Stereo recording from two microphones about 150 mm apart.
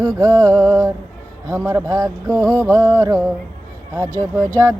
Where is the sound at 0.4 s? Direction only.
20° right (ahead or behind).